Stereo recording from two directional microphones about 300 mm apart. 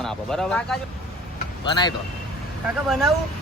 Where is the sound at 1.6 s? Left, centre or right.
Centre.